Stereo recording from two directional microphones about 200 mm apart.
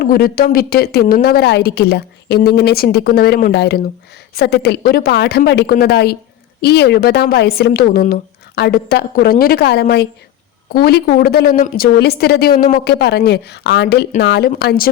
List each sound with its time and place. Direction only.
0.0 s a woman's voice: 50° left (ahead or behind)